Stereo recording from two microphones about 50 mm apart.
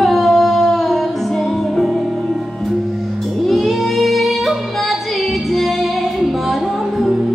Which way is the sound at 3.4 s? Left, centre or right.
Centre.